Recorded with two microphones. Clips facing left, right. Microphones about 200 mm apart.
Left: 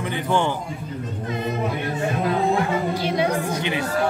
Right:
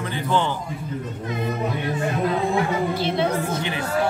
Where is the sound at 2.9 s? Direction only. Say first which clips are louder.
Even; 10° left (ahead or behind).